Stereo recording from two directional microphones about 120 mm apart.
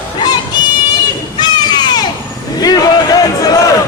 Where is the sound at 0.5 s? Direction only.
35° left (ahead or behind).